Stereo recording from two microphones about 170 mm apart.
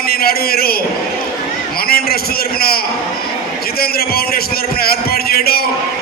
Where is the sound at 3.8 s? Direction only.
65° left (ahead or behind).